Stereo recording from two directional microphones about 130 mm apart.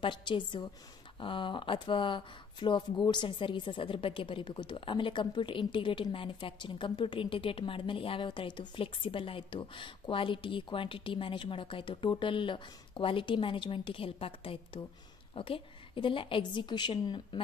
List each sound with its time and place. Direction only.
0.0 s speech: 40° left (ahead or behind)